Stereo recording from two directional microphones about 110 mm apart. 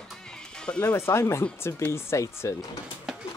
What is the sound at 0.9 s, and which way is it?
Speech, 25° left (ahead or behind).